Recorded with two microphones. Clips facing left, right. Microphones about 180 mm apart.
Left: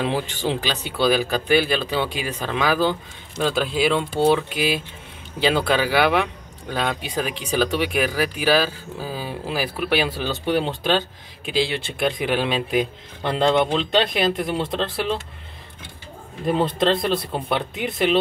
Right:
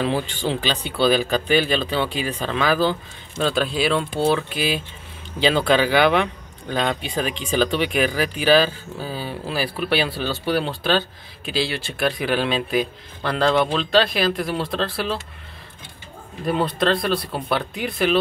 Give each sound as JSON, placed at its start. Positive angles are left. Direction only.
{"t": 0.0, "sound": "speech", "side_deg": 15}
{"t": 16.4, "sound": "speech", "side_deg": 25}